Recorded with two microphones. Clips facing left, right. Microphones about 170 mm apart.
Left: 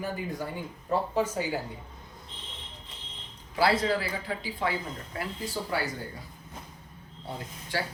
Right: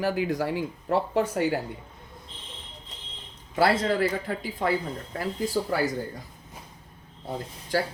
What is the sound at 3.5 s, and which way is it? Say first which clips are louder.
Speech: right 2 dB; 50° right (ahead or behind).